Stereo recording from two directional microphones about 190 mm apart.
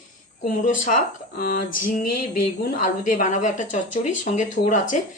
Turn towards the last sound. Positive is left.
turn(degrees=40)  # may be behind; listen again after turning